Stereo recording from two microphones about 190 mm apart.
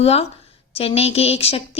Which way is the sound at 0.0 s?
30° left (ahead or behind).